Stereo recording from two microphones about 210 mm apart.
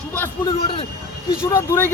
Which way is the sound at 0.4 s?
25° left (ahead or behind).